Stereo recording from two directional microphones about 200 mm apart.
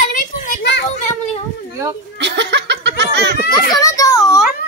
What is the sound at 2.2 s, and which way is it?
Laughter, 60° right (ahead or behind).